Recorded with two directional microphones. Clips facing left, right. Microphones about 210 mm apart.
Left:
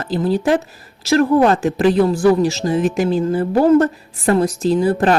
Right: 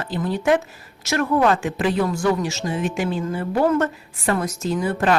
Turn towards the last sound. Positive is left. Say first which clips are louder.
# left 6 dB
turn(degrees=35)  # may be behind; listen again after turning